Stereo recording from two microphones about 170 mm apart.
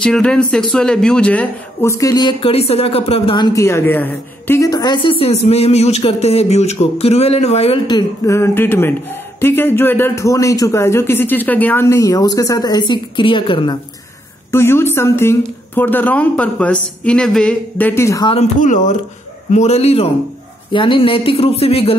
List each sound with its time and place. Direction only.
0.0 s speech: 5° left (ahead or behind); by 5.1 s 25° left (ahead or behind)
5.2 s speech: 35° left (ahead or behind)
14.5 s speech: 15° left (ahead or behind)
18.2 s speech: 35° left (ahead or behind)
18.6 s speech: 45° left (ahead or behind)